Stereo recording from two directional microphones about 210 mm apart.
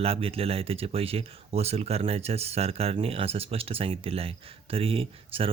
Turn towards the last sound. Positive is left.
turn(degrees=-25)  # may be behind; listen again after turning